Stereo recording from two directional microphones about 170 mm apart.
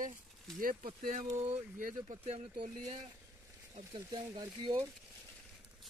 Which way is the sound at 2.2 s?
35° right (ahead or behind).